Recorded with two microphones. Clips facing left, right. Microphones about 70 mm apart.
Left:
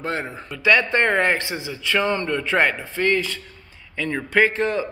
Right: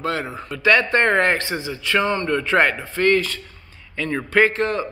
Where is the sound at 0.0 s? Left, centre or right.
Left.